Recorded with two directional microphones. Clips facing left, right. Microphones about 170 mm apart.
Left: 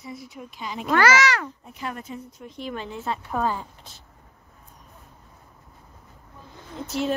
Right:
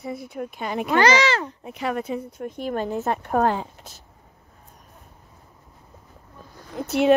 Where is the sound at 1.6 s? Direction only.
75° right (ahead or behind).